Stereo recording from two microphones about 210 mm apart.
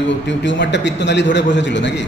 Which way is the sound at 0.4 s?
60° left (ahead or behind).